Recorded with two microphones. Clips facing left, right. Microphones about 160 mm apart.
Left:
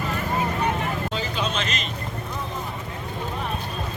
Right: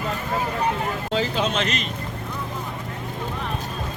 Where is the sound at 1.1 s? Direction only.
90° right; by 1.8 s 65° right (ahead or behind).